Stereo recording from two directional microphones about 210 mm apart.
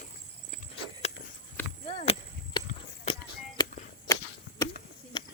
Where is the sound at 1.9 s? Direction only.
30° left (ahead or behind).